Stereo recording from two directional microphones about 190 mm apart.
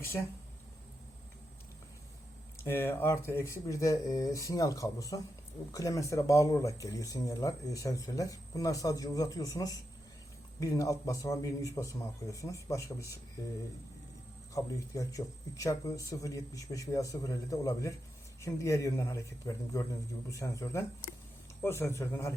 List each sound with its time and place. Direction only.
0.0 s speech: 15° left (ahead or behind)
2.6 s speech: 10° left (ahead or behind)
14.5 s speech: 15° left (ahead or behind)